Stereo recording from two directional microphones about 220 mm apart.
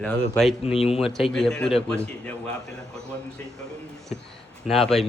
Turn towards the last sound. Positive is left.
turn(degrees=0)  # may be behind; listen again after turning